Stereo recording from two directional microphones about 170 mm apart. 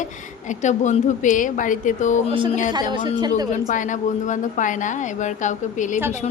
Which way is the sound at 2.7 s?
25° right (ahead or behind).